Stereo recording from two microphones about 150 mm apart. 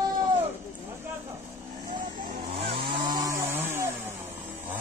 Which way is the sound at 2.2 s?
80° right.